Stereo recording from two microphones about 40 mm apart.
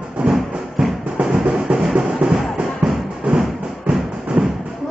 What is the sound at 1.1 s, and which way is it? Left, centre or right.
Music, right.